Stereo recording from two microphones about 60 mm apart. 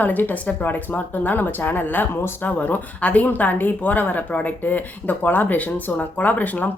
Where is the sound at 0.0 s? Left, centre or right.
Left.